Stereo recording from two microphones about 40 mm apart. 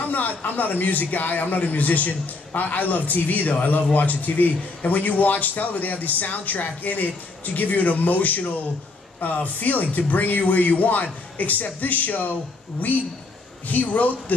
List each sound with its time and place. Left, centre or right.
0.0 s a man's voice: left
13.7 s a man's voice: left